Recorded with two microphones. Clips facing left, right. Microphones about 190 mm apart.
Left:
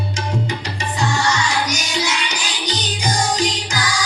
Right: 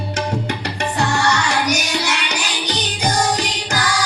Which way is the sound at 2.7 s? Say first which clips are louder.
Right 2 dB; 60° right (ahead or behind).